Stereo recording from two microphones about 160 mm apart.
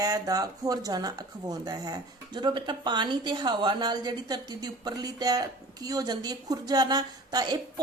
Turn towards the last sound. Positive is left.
turn(degrees=-25)  # may be behind; listen again after turning